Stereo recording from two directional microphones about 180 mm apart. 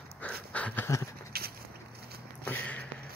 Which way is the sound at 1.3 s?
60° right (ahead or behind).